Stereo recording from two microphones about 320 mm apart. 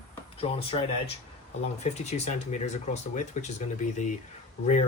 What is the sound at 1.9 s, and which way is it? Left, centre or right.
Speech, centre.